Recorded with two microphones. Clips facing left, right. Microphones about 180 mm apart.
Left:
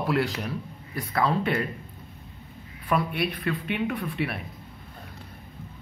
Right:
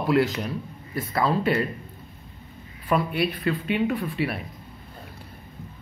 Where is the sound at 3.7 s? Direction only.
5° right (ahead or behind).